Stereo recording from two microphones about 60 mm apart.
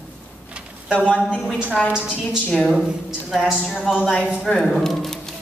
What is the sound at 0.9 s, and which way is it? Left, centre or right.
Speech, centre.